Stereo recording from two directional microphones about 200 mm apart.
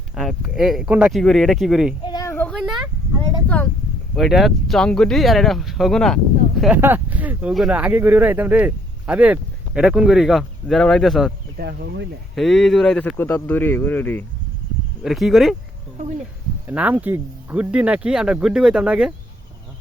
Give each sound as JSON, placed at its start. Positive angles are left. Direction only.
{"t": 0.2, "sound": "speech", "side_deg": 0}
{"t": 2.0, "sound": "female singing", "side_deg": 20}
{"t": 2.3, "sound": "a sound", "side_deg": 5}
{"t": 4.1, "sound": "speech", "side_deg": 0}
{"t": 6.6, "sound": "speech", "side_deg": -10}
{"t": 11.5, "sound": "speech", "side_deg": -50}
{"t": 12.3, "sound": "speech", "side_deg": 0}
{"t": 16.6, "sound": "speech", "side_deg": -10}